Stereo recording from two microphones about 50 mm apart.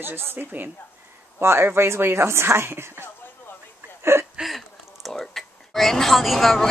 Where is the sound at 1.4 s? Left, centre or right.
Right.